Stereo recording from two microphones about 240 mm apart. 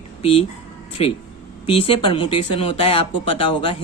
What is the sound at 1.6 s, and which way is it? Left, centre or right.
Speech, left.